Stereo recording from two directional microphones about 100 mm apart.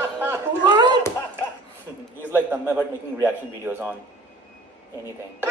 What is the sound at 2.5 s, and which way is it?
Speech, 20° right (ahead or behind).